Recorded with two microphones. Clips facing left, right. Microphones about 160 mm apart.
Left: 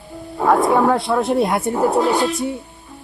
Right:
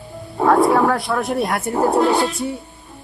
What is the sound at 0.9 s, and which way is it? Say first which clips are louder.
Speech: left 3 dB; 25° left (ahead or behind).